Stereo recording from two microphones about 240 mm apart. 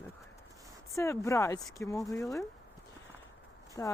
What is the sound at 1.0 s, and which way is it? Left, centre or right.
Speech, centre.